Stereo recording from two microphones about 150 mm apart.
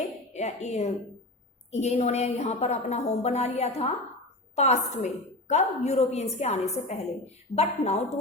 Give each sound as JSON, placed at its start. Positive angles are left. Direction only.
{"t": 0.3, "sound": "a woman's voice", "side_deg": 50}